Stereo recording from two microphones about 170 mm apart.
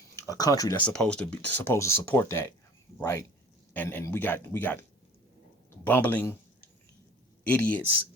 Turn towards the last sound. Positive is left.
turn(degrees=10)  # may be behind; listen again after turning